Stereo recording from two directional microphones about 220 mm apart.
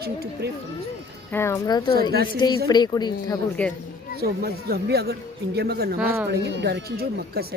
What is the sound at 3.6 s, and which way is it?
Speech, 5° left (ahead or behind).